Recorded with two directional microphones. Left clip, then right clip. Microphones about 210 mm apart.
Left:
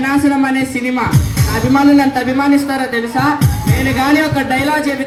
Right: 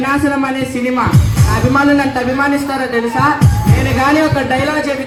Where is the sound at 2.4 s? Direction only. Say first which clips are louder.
Left 1 dB; 55° left (ahead or behind).